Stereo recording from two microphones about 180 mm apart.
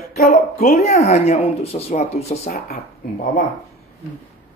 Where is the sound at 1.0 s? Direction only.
35° left (ahead or behind).